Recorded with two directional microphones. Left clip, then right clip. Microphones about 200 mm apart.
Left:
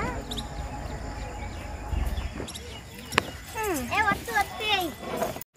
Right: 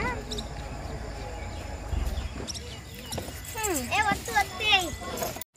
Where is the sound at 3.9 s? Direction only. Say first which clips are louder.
Left 1 dB; 50° left (ahead or behind).